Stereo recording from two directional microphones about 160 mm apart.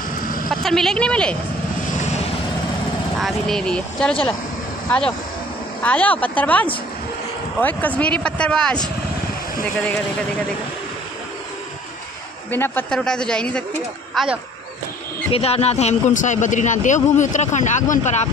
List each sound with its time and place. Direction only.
0.5 s a woman's voice: centre (ahead or behind)
3.2 s a woman's voice: centre (ahead or behind)
12.4 s a woman's voice: 15° left (ahead or behind)
14.1 s a woman's voice: 5° right (ahead or behind)
15.3 s a man's voice: 40° left (ahead or behind)